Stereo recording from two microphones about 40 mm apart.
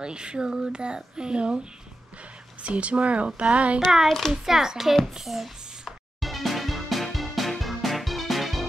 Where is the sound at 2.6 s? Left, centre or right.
Right.